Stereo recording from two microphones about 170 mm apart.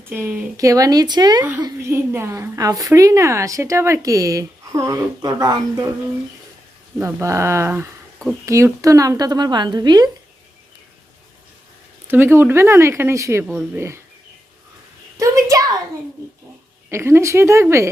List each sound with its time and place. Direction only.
0.0 s a woman's voice: 15° right (ahead or behind)
7.0 s a woman's voice: 15° right (ahead or behind)
12.0 s speech: 15° right (ahead or behind)
15.2 s a sound: 20° right (ahead or behind)
16.9 s speech: 15° right (ahead or behind)